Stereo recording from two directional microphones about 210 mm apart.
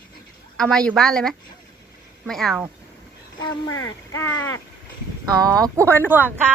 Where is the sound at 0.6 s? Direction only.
5° left (ahead or behind).